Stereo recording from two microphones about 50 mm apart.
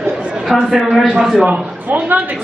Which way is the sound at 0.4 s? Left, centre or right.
Centre.